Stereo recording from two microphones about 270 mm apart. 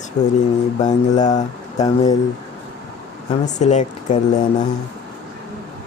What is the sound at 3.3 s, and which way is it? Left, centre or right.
Speech, left.